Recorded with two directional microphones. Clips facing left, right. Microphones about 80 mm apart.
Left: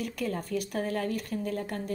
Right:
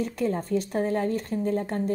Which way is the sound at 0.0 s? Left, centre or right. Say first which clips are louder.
Right 6 dB; right.